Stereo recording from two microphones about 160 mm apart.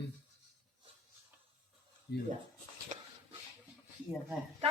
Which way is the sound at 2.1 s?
90° left.